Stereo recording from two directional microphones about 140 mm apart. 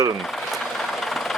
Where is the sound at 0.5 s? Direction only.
Centre (ahead or behind).